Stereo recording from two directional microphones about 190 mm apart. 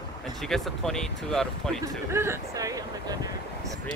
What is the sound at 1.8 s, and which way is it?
Speech, 15° right (ahead or behind).